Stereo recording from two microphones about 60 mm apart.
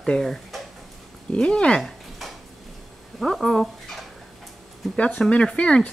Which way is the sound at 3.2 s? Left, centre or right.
Centre.